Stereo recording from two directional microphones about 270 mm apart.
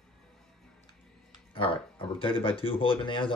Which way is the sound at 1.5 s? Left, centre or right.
Centre.